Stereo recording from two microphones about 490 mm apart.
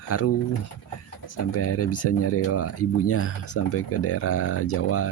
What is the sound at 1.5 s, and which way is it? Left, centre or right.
Speech, left.